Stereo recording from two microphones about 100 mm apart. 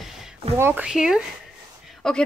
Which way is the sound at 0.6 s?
20° right (ahead or behind).